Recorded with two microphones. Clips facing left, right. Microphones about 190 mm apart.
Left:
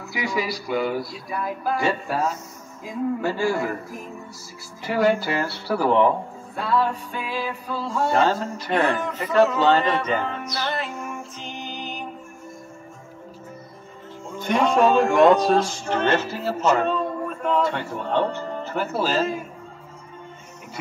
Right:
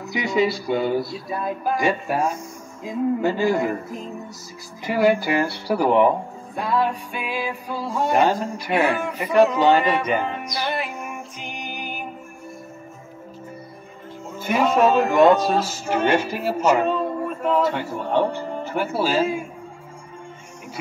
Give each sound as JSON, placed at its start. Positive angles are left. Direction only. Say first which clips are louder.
{"t": 0.0, "sound": "a sound", "louder": "right 5 dB", "side_deg": -20}
{"t": 4.8, "sound": "speech", "louder": "right 2 dB", "side_deg": -15}
{"t": 14.3, "sound": "speech", "louder": "even", "side_deg": -5}